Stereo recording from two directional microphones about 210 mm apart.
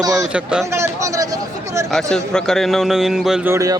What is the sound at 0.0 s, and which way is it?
A man's voice, 15° right (ahead or behind).